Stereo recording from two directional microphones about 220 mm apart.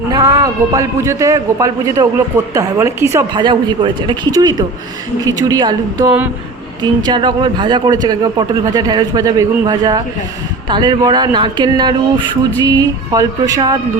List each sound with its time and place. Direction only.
0.1 s a man's voice: 15° right (ahead or behind)